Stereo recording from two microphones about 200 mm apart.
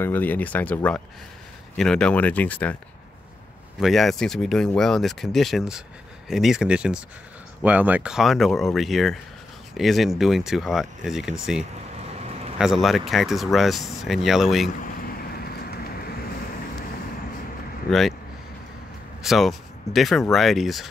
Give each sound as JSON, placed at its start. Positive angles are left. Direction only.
{"t": 0.0, "sound": "speech", "side_deg": 10}
{"t": 3.8, "sound": "speech", "side_deg": 0}
{"t": 14.8, "sound": "boat", "side_deg": 45}
{"t": 17.8, "sound": "speech", "side_deg": 0}
{"t": 19.2, "sound": "speech", "side_deg": 0}